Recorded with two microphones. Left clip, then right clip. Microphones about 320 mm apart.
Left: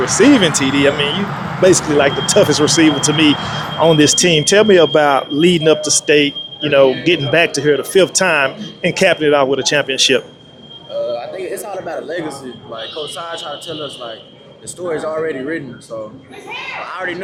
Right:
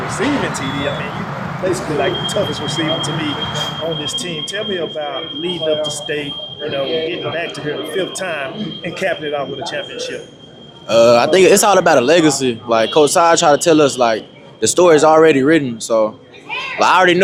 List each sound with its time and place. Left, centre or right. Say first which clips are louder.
0.1 s speech: left 8 dB; left
1.6 s speech: left 7 dB; left
10.9 s speech: right 12 dB; right
14.6 s speech: right 12 dB; right